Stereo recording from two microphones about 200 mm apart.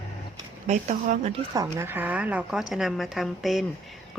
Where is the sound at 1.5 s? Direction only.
15° right (ahead or behind).